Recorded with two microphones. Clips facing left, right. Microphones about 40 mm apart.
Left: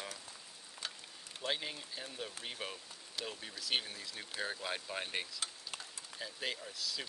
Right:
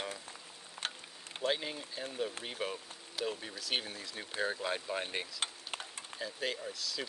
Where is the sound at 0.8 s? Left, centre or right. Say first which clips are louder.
Right 5 dB; right.